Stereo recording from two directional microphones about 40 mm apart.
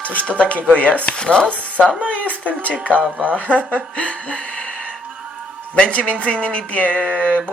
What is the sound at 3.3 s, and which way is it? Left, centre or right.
Speech, left.